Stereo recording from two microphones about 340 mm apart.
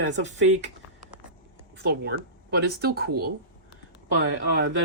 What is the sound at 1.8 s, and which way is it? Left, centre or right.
A man's voice, right.